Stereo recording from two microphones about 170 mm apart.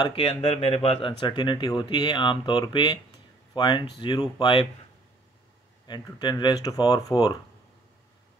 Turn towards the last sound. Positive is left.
turn(degrees=25)  # may be behind; listen again after turning